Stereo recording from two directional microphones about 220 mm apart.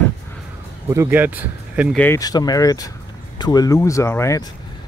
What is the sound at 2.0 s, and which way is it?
Speech, 15° left (ahead or behind).